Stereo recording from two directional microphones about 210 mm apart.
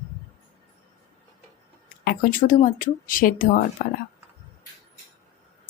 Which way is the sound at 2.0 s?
40° left (ahead or behind).